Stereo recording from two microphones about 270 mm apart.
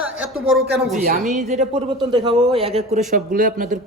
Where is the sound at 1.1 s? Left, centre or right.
Right.